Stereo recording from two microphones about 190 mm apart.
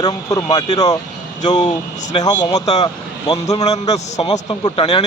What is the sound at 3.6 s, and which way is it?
Speech, 35° left (ahead or behind).